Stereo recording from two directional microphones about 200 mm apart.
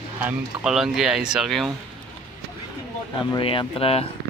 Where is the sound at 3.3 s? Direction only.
25° left (ahead or behind).